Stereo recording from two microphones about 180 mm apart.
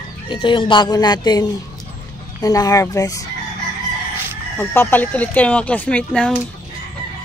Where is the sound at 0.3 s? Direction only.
25° left (ahead or behind).